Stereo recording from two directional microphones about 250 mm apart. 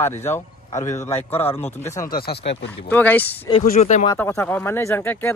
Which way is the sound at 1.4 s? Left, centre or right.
Centre.